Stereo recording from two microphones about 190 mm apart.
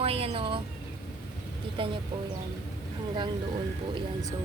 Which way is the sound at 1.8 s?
25° right (ahead or behind).